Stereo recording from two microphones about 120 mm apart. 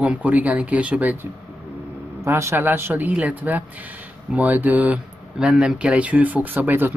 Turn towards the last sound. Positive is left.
turn(degrees=-15)  # may be behind; listen again after turning